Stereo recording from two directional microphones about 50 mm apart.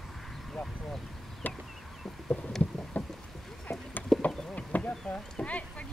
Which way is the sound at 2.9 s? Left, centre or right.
Left.